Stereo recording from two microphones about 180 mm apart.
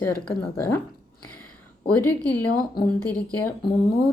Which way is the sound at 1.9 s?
10° left (ahead or behind).